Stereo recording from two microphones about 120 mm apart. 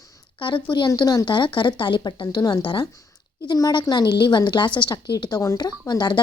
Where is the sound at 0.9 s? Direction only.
30° left (ahead or behind).